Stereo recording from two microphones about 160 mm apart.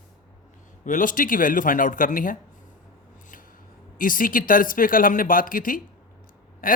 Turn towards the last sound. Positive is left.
turn(degrees=60)  # may be behind; listen again after turning